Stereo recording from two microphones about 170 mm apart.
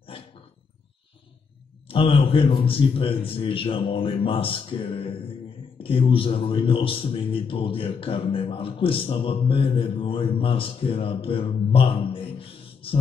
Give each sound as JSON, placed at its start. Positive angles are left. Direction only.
{"t": 1.9, "sound": "a man's voice", "side_deg": 30}